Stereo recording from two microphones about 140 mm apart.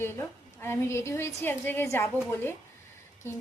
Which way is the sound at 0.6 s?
20° left (ahead or behind).